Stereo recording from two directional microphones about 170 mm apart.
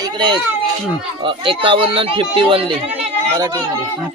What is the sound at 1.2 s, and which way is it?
Speech, 30° right (ahead or behind).